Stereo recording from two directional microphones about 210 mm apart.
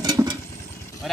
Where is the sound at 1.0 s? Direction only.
Centre (ahead or behind).